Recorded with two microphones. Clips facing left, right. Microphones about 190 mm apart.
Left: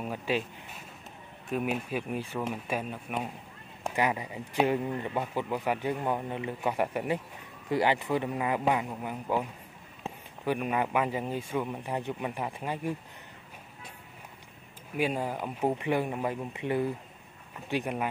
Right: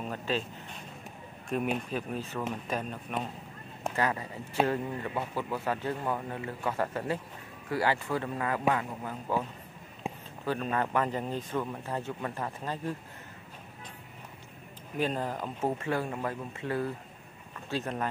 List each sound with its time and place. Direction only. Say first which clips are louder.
0.0 s a man's voice: left 2 dB; 10° left (ahead or behind)
10.0 s a sound: right 2 dB; 15° right (ahead or behind)
10.4 s a man's voice: left 2 dB; 15° left (ahead or behind)
15.0 s a man's voice: left 1 dB; 10° left (ahead or behind)